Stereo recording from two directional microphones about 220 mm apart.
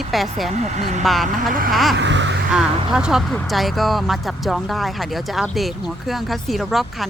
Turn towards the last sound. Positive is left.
turn(degrees=0)  # may be behind; listen again after turning